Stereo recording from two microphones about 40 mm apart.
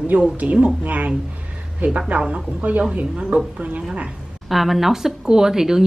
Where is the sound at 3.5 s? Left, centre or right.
Right.